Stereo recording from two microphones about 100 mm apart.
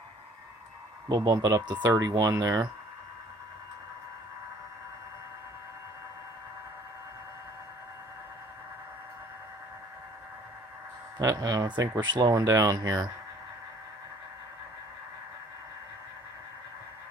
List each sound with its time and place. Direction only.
1.0 s speech: 40° right (ahead or behind)
1.9 s speech: 35° right (ahead or behind)
11.2 s speech: 40° right (ahead or behind)